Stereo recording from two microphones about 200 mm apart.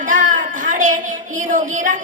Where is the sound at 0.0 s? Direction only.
40° right (ahead or behind).